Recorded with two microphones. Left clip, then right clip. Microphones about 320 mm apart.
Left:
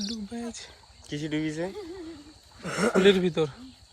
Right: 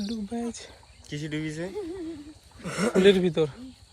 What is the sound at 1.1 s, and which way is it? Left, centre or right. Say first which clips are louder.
Speech: left 2 dB; left.